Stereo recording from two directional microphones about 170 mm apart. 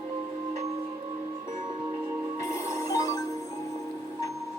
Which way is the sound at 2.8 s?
20° left (ahead or behind).